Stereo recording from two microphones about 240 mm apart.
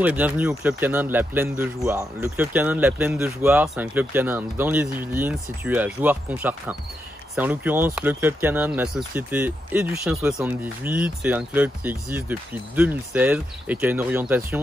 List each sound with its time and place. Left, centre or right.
0.0 s speech: centre